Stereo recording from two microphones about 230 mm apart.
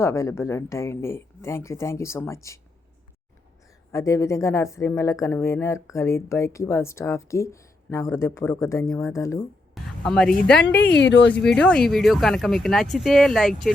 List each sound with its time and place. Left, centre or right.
0.0 s speech: centre
3.9 s speech: centre
10.0 s speech: centre
10.6 s speech: left
11.4 s speech: centre